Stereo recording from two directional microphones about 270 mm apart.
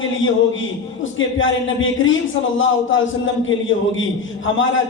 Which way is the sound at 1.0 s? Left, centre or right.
Left.